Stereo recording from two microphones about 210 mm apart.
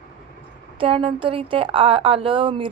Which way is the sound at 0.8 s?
25° right (ahead or behind).